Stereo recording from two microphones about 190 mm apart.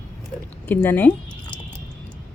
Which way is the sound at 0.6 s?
10° left (ahead or behind).